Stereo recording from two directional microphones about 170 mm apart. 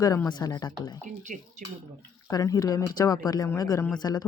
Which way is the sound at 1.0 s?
45° right (ahead or behind).